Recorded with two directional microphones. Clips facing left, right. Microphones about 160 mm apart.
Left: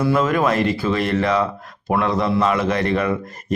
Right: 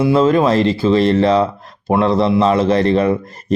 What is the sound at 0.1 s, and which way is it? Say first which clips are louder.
Speech: right 7 dB; 25° right (ahead or behind).